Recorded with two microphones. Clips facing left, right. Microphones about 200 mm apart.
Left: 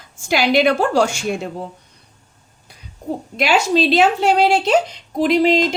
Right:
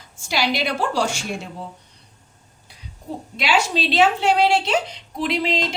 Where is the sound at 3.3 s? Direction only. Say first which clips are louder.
Left 5 dB; 45° left (ahead or behind).